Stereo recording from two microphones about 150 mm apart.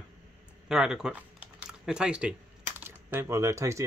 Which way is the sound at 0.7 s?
5° right (ahead or behind).